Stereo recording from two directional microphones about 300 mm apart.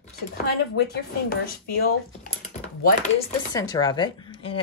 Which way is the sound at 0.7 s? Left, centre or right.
Left.